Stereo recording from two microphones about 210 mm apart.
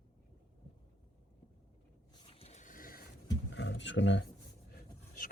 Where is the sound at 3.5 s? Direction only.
60° left (ahead or behind).